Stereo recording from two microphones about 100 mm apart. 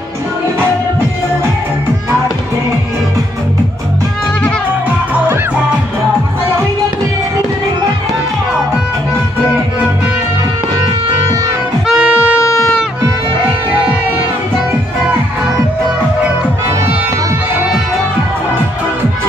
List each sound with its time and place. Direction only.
11.9 s harmonica: 10° right (ahead or behind)
12.4 s music: 30° left (ahead or behind)